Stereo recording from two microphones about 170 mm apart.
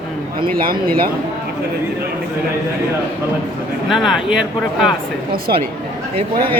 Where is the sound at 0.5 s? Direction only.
60° right (ahead or behind).